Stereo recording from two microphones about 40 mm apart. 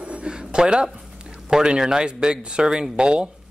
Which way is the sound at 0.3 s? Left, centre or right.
Right.